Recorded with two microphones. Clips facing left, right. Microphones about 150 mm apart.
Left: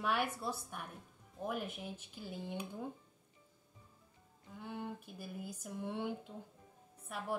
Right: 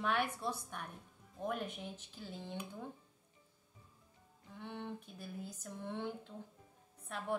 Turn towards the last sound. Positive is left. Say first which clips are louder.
# right 1 dB
turn(degrees=10)  # may be behind; listen again after turning